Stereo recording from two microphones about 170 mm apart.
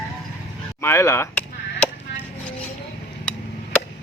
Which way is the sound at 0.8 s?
15° left (ahead or behind).